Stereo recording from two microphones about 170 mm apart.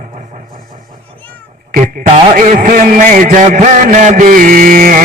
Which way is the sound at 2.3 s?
50° right (ahead or behind).